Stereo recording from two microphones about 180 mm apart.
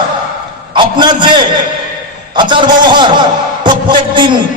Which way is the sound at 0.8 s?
25° right (ahead or behind).